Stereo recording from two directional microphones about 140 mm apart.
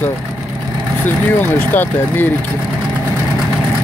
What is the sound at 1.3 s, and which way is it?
Speech, 15° left (ahead or behind).